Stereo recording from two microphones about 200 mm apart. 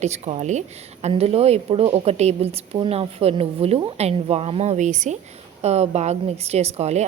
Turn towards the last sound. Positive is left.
turn(degrees=-35)  # may be behind; listen again after turning